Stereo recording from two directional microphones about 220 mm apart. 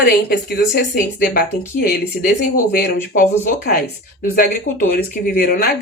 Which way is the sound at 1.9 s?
40° left (ahead or behind).